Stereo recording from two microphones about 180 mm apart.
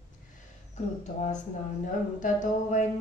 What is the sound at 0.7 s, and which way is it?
Speech, 40° left (ahead or behind).